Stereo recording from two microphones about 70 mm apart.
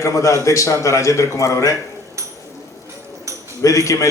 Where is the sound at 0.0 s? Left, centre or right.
Left.